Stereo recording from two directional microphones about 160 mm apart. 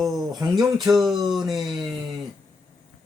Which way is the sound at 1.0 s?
25° right (ahead or behind).